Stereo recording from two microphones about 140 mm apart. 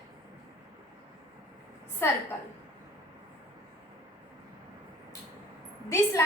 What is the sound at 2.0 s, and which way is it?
Speech, 15° left (ahead or behind).